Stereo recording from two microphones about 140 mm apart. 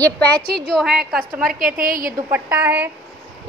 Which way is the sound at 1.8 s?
90° right.